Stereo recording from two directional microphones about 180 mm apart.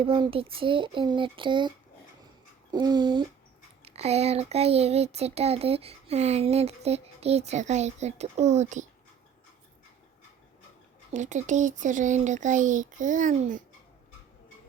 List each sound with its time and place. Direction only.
0.0 s a child's voice: 30° right (ahead or behind)
2.7 s a child's voice: 25° right (ahead or behind)
3.8 s speech: 35° right (ahead or behind)
11.1 s speech: 40° right (ahead or behind)